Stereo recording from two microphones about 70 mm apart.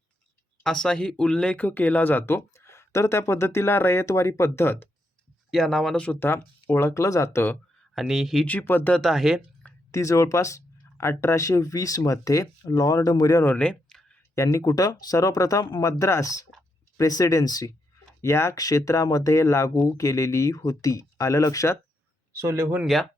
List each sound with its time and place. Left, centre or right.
0.6 s speech: centre; by 4.9 s left
5.5 s speech: centre
6.1 s speech: left
7.9 s speech: centre
8.4 s speech: left
9.0 s speech: centre
9.9 s speech: left
13.6 s a sound: centre
14.3 s speech: left
18.2 s speech: left
18.5 s speech: left
22.4 s speech: right